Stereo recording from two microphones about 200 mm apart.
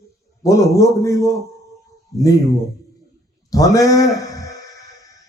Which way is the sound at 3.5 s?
15° left (ahead or behind).